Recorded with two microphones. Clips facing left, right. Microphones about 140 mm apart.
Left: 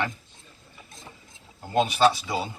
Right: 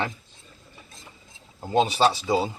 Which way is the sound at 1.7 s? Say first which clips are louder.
Even; 30° right (ahead or behind).